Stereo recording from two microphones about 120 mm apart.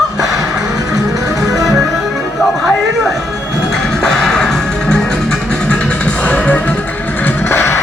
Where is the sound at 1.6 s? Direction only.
Centre (ahead or behind).